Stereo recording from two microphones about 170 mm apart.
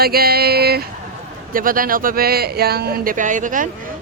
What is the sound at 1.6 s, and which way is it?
Speech, 55° right (ahead or behind).